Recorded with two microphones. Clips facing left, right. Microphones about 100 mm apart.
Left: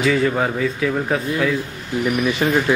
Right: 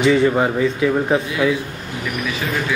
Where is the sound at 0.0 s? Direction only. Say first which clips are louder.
Right 3 dB; centre (ahead or behind).